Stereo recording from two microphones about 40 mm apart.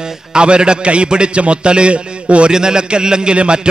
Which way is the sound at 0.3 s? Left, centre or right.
Right.